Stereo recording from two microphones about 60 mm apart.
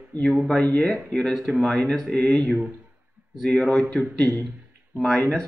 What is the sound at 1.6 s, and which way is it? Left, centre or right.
Speech, centre.